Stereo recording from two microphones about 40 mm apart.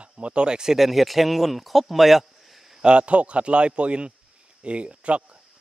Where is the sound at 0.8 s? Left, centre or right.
Centre.